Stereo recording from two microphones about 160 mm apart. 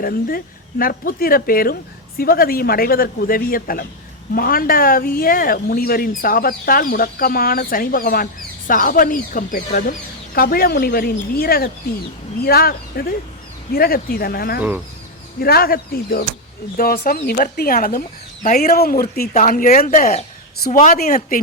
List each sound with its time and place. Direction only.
0.0 s speech: 65° left (ahead or behind)
19.3 s speech: 55° left (ahead or behind)
19.9 s speech: 50° left (ahead or behind)